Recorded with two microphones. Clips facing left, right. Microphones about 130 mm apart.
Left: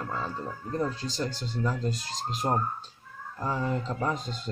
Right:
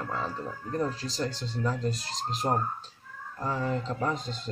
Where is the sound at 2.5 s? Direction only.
15° left (ahead or behind).